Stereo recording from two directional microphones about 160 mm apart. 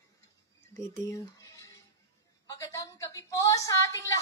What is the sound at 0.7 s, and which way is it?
Speech, 20° left (ahead or behind).